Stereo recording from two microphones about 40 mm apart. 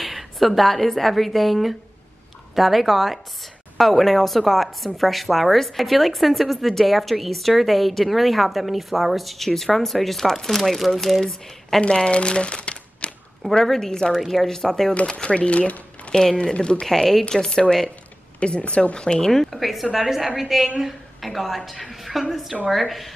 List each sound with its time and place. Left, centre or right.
0.0 s a woman's voice: centre
11.8 s speech: left
13.7 s speech: centre
14.1 s speech: centre
15.0 s speech: left
16.1 s speech: centre
16.5 s speech: left
16.8 s speech: centre
18.4 s speech: left
19.3 s speech: centre
19.6 s a woman's voice: centre